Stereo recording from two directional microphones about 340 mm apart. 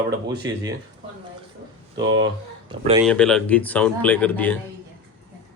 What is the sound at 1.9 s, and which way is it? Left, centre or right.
Speech, right.